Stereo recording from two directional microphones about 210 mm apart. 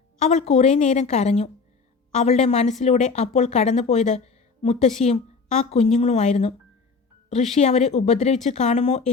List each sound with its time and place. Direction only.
0.2 s speech: 30° left (ahead or behind)